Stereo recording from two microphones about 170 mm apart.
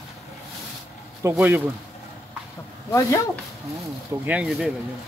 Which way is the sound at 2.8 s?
20° left (ahead or behind).